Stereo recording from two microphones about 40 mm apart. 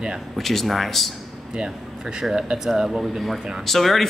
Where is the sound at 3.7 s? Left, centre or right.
Centre.